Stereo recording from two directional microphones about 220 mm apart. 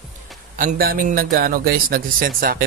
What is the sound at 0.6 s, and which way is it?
A man's voice, 40° right (ahead or behind).